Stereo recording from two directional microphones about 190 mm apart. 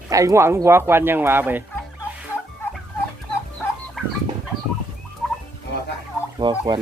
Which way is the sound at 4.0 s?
Centre (ahead or behind).